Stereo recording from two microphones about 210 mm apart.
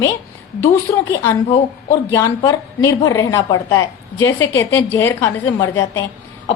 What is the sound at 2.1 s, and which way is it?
A woman's voice, 15° left (ahead or behind).